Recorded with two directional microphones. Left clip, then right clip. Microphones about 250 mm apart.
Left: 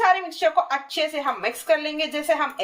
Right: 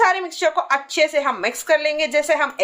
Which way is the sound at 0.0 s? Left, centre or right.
Centre.